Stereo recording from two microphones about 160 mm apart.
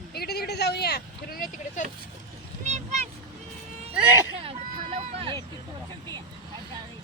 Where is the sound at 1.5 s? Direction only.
50° left (ahead or behind).